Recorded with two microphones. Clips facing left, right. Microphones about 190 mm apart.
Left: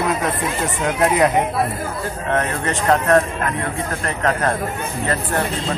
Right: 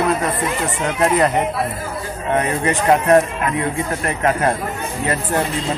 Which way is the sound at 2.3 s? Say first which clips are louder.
Right 4 dB; 15° right (ahead or behind).